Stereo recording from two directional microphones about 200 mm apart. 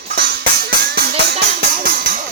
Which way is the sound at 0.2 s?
55° right (ahead or behind).